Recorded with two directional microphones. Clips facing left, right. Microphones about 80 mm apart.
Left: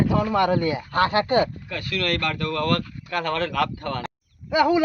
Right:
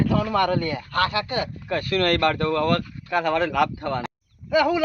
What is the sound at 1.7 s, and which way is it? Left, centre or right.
Speech, right.